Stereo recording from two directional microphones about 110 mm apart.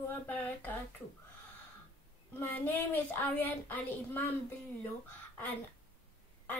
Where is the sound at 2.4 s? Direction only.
15° left (ahead or behind).